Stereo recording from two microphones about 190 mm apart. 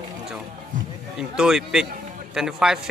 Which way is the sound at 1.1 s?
5° right (ahead or behind).